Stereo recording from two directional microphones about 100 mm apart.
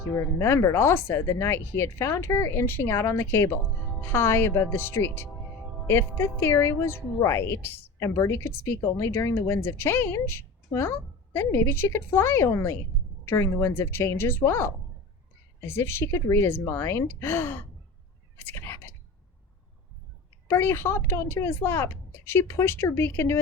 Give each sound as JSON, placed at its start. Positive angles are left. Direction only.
{"t": 0.1, "sound": "speech", "side_deg": 30}
{"t": 18.3, "sound": "cat", "side_deg": 20}
{"t": 20.5, "sound": "speech", "side_deg": 25}